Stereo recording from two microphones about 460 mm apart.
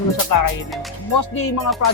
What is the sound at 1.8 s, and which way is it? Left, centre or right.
Speech, left.